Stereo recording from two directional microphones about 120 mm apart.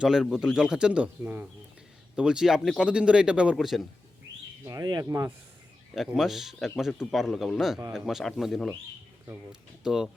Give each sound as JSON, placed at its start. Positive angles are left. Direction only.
{"t": 0.0, "sound": "speech", "side_deg": -5}
{"t": 4.6, "sound": "speech", "side_deg": -30}
{"t": 6.1, "sound": "speech", "side_deg": 0}